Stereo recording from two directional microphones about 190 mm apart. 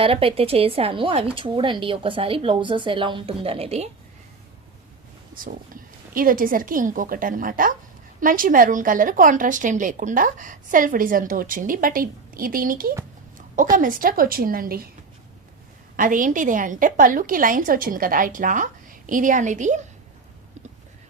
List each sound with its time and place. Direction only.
0.0 s a woman's voice: 30° right (ahead or behind)
5.3 s a woman's voice: 45° right (ahead or behind)
16.0 s a woman's voice: 45° right (ahead or behind)